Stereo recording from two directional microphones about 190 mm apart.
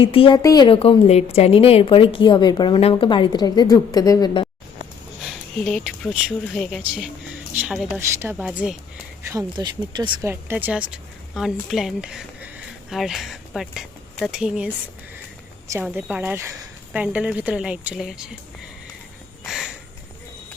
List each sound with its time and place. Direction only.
0.0 s a woman's voice: 30° left (ahead or behind)
5.2 s a woman's voice: centre (ahead or behind)
9.3 s speech: 20° right (ahead or behind)
10.2 s a woman's voice: 10° right (ahead or behind)
15.8 s a woman's voice: 10° right (ahead or behind)
19.5 s a sound: 5° right (ahead or behind)